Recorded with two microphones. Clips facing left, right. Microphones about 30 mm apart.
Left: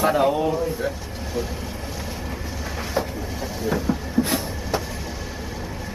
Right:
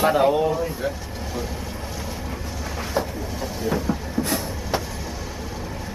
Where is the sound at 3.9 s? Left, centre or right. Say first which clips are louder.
Left 1 dB; centre.